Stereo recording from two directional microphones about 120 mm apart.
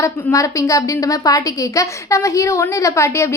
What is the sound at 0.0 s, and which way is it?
A woman's voice, 25° left (ahead or behind).